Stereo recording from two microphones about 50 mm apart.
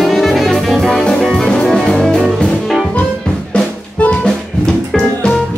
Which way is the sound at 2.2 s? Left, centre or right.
Centre.